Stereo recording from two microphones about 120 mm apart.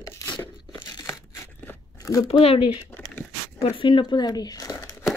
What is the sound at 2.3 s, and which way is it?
Speech, 55° left (ahead or behind).